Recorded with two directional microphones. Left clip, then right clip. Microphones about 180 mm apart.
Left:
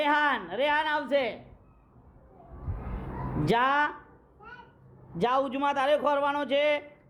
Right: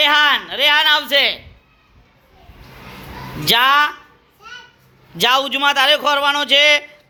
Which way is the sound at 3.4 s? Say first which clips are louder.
Right 12 dB; 10° left (ahead or behind).